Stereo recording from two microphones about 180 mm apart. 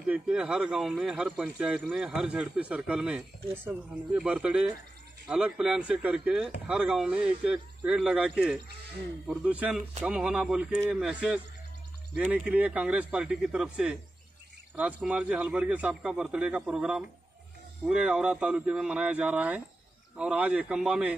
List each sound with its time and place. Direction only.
0.0 s a man's voice: 5° right (ahead or behind)